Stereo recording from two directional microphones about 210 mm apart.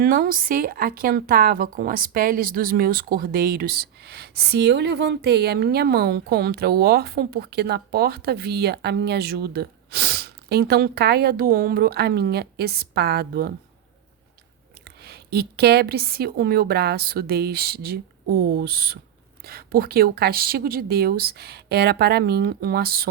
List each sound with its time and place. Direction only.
0.0 s speech: 45° right (ahead or behind)
14.8 s speech: 50° right (ahead or behind)